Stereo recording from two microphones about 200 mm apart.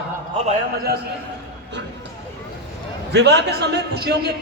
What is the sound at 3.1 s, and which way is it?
A man's voice, 60° right (ahead or behind).